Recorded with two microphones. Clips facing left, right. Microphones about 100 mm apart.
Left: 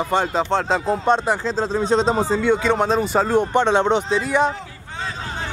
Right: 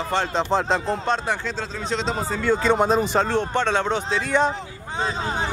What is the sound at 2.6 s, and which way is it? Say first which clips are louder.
Speech: even; 5° right (ahead or behind).